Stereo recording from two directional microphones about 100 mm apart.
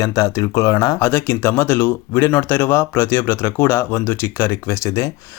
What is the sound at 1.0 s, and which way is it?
Speech, 25° left (ahead or behind).